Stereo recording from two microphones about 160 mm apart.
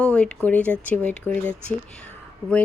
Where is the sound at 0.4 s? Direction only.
10° left (ahead or behind).